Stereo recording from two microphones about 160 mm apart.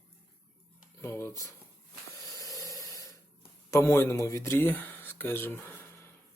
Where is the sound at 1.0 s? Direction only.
15° left (ahead or behind).